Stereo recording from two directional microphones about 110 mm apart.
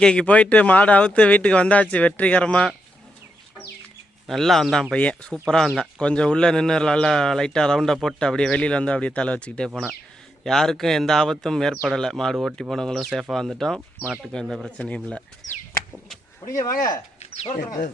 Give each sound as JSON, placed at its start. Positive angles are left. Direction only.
{"t": 0.0, "sound": "speech", "side_deg": 10}
{"t": 4.3, "sound": "speech", "side_deg": 0}
{"t": 16.5, "sound": "speech", "side_deg": 30}
{"t": 17.2, "sound": "a sound", "side_deg": 75}